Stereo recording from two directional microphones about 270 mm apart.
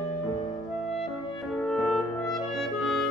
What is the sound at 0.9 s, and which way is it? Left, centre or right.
Clarinet, centre.